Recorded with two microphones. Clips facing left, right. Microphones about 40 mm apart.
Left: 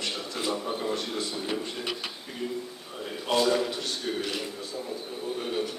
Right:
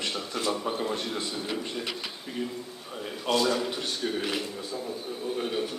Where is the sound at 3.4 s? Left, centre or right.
Centre.